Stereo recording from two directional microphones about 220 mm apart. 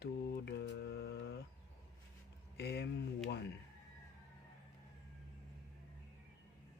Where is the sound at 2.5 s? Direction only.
50° left (ahead or behind).